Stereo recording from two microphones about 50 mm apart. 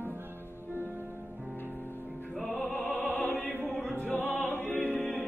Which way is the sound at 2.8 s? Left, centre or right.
Centre.